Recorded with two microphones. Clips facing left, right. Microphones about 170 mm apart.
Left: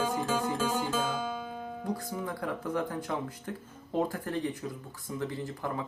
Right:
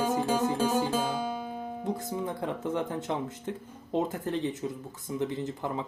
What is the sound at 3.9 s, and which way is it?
Speech, 20° right (ahead or behind).